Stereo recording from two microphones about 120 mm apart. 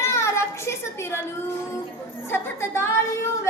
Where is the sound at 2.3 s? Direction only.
20° left (ahead or behind).